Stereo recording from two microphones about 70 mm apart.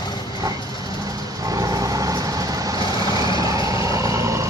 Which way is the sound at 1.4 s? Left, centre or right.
Right.